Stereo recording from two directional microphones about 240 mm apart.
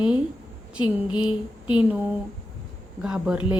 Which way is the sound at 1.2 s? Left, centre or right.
Centre.